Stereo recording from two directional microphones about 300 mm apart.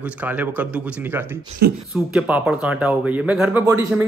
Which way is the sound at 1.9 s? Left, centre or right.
Centre.